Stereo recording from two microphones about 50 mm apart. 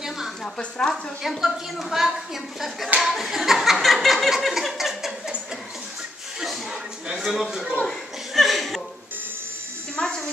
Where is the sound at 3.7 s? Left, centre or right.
Centre.